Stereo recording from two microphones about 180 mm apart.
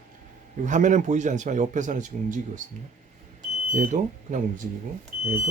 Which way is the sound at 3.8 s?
45° right (ahead or behind).